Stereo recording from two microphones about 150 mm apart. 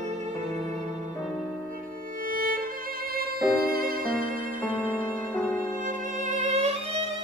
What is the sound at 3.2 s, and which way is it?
Violin, 90° right.